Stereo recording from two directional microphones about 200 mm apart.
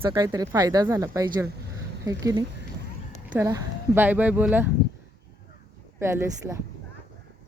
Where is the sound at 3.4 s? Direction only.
15° right (ahead or behind).